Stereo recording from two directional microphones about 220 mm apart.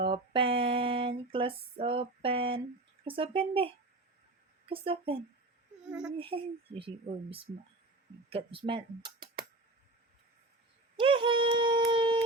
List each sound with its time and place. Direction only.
0.0 s a sound: 25° right (ahead or behind)
3.0 s speech: 25° right (ahead or behind)
4.7 s speech: 25° right (ahead or behind)
5.9 s speech: 5° right (ahead or behind)
6.1 s speech: 25° right (ahead or behind)
10.9 s a sound: 25° right (ahead or behind)